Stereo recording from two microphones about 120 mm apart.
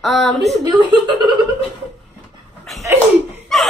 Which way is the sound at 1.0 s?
40° right (ahead or behind).